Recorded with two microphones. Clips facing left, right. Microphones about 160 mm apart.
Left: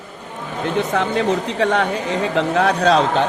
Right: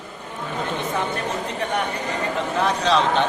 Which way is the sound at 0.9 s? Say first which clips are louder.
Left 8 dB; 90° left.